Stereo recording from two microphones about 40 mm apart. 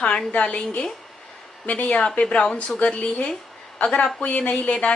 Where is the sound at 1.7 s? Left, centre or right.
Left.